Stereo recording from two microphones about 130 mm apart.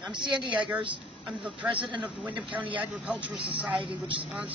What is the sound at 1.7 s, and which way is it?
Speech, 40° right (ahead or behind).